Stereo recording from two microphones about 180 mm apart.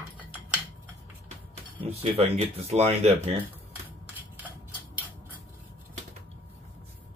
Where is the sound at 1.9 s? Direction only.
35° right (ahead or behind).